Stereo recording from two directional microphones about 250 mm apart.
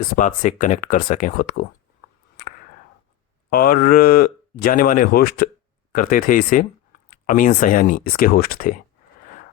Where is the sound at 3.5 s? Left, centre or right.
Left.